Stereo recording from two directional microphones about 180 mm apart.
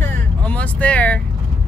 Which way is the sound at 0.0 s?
5° left (ahead or behind).